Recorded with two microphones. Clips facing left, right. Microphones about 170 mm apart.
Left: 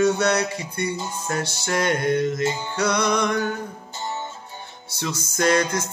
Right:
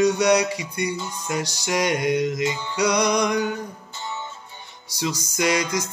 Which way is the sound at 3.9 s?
40° left (ahead or behind).